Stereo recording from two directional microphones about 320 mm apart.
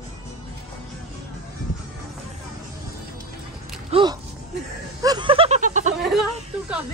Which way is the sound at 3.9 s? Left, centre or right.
Centre.